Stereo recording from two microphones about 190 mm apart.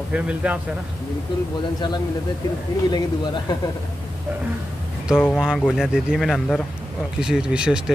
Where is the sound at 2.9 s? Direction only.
20° left (ahead or behind).